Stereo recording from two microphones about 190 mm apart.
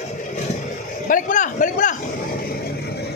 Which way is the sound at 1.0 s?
45° left (ahead or behind).